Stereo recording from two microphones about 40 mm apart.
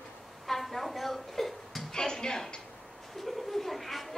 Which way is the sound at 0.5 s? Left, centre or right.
Centre.